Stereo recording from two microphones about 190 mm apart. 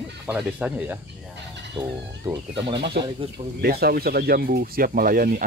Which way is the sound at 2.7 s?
65° right (ahead or behind).